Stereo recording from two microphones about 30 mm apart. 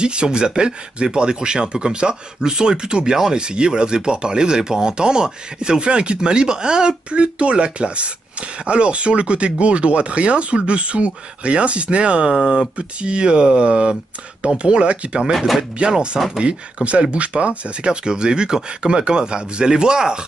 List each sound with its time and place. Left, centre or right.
0.0 s speech: right
7.1 s speech: right
15.3 s speech: centre
15.8 s speech: right
18.0 s speech: right